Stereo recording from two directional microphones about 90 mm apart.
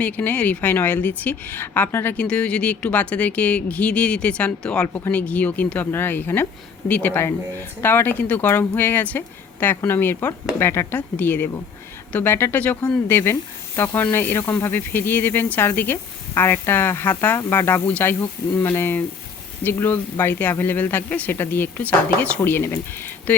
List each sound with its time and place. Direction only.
0.0 s speech: 15° left (ahead or behind)
2.1 s speech: 10° left (ahead or behind)